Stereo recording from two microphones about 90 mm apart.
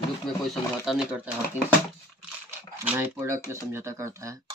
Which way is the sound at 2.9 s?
30° right (ahead or behind).